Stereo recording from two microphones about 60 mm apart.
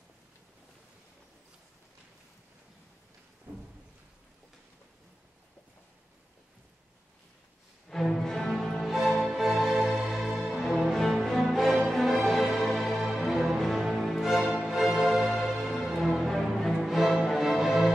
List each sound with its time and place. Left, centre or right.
3.5 s thunder: right
7.9 s music: centre